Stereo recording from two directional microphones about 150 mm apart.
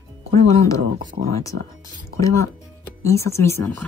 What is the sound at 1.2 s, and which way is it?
Speech, 90° right.